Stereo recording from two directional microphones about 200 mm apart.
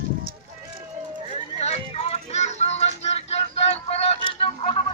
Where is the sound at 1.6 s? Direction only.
30° left (ahead or behind).